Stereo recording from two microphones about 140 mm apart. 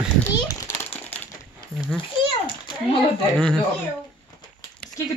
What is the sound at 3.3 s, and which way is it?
Speech, 5° left (ahead or behind).